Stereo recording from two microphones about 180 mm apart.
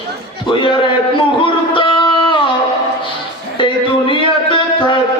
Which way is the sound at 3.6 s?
25° left (ahead or behind).